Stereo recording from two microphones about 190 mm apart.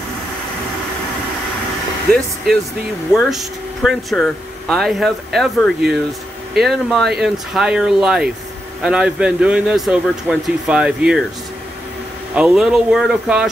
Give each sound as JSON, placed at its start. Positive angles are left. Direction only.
{"t": 3.1, "sound": "speech", "side_deg": 0}
{"t": 12.4, "sound": "speech", "side_deg": -5}